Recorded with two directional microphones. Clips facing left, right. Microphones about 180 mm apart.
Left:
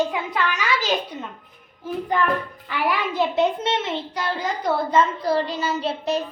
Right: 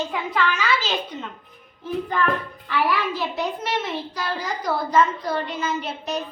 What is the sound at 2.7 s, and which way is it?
A child's voice, 20° left (ahead or behind).